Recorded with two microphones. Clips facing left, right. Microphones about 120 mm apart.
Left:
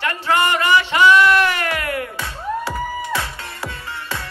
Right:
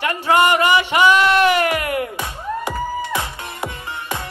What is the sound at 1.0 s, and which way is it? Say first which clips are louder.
Music: left 1 dB; 25° right (ahead or behind).